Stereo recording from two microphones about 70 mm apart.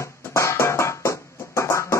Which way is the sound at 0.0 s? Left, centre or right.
Left.